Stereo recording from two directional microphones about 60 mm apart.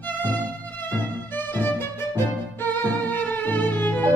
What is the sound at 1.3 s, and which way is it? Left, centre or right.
Music, left.